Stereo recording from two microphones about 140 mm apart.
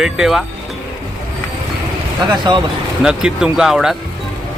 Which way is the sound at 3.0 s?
5° right (ahead or behind).